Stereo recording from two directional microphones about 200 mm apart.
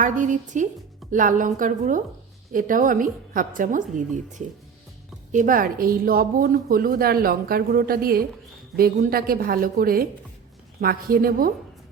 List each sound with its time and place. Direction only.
0.0 s a woman's voice: 40° right (ahead or behind)